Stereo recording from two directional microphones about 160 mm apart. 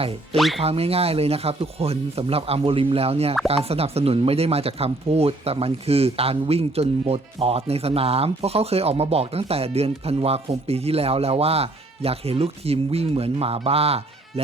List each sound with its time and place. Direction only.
0.3 s speech: centre (ahead or behind)
0.6 s speech: 40° right (ahead or behind)